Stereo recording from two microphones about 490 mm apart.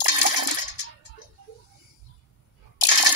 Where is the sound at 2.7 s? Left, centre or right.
Left.